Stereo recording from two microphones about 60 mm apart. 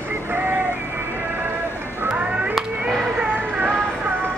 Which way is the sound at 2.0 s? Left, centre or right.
Right.